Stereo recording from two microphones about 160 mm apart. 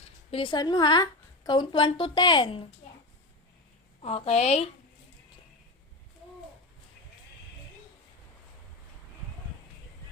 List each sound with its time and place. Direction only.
0.3 s a woman's voice: 35° left (ahead or behind)
4.0 s a woman's voice: 40° left (ahead or behind)